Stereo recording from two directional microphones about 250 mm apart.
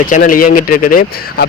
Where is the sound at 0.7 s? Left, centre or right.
Left.